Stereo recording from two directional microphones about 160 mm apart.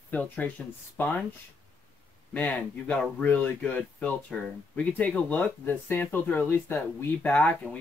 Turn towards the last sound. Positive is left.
turn(degrees=10)  # may be behind; listen again after turning